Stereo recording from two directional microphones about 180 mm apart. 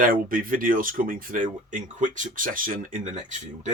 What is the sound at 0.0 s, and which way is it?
Speech, 50° right (ahead or behind).